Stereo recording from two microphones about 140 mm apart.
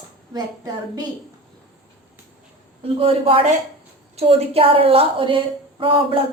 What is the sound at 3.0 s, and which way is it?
A woman's voice, 40° right (ahead or behind).